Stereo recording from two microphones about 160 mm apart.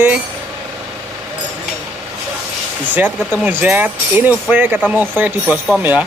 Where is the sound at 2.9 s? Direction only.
10° right (ahead or behind).